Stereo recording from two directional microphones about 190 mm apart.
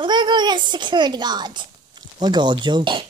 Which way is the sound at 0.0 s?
25° right (ahead or behind).